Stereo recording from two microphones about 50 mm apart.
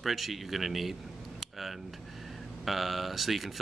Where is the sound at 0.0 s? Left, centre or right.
Centre.